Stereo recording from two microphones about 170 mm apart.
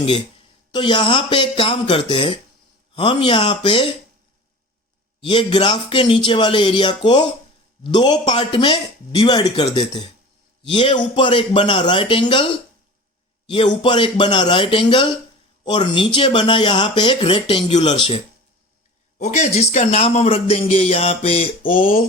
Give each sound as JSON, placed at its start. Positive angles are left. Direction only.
{"t": 0.7, "sound": "speech", "side_deg": 25}
{"t": 5.2, "sound": "speech", "side_deg": 30}
{"t": 13.8, "sound": "speech", "side_deg": 30}
{"t": 19.2, "sound": "a man's voice", "side_deg": 40}